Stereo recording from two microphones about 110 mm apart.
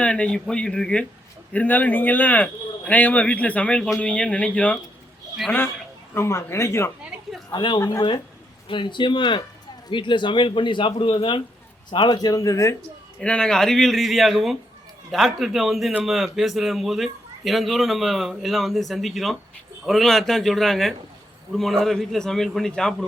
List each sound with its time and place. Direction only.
0.0 s speech: 10° left (ahead or behind)
7.0 s a sound: centre (ahead or behind)
7.5 s a man's voice: 45° left (ahead or behind)
13.1 s a man's voice: 10° left (ahead or behind)